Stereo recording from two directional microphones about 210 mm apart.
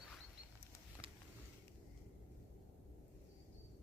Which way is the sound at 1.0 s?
25° right (ahead or behind).